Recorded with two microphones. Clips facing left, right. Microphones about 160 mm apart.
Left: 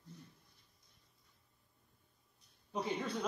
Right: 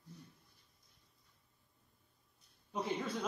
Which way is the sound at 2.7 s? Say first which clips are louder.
Even; centre (ahead or behind).